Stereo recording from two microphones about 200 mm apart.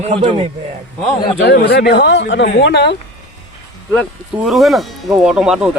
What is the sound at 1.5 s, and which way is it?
Speech, 55° left (ahead or behind).